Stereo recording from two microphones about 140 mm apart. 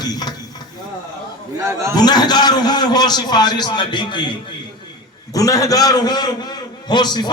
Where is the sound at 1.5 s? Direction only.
20° right (ahead or behind).